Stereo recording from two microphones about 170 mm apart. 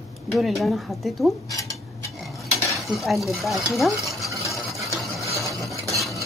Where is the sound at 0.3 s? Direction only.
Centre (ahead or behind).